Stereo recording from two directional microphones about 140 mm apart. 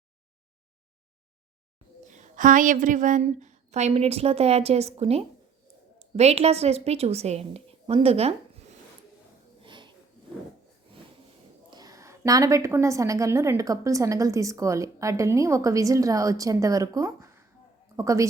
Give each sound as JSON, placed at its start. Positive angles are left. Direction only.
{"t": 2.0, "sound": "a woman's voice", "side_deg": -60}
{"t": 9.6, "sound": "a sound", "side_deg": -35}
{"t": 11.7, "sound": "a woman's voice", "side_deg": -25}